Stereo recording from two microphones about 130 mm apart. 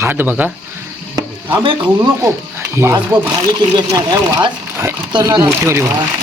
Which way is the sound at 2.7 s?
20° right (ahead or behind).